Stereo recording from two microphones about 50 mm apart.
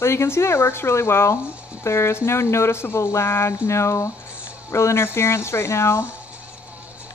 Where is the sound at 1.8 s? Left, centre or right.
Left.